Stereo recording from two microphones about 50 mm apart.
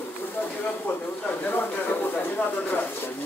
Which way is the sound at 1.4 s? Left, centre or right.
Left.